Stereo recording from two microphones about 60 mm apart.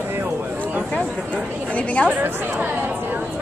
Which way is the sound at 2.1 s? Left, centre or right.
Right.